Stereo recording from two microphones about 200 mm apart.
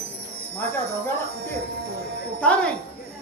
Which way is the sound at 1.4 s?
55° right (ahead or behind).